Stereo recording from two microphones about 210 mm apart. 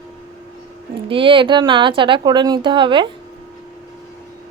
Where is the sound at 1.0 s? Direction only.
25° right (ahead or behind).